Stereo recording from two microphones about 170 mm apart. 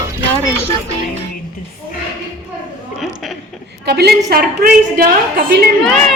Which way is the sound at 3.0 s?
Centre (ahead or behind).